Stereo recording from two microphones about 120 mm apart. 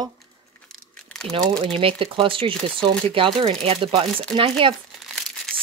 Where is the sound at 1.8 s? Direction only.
50° right (ahead or behind).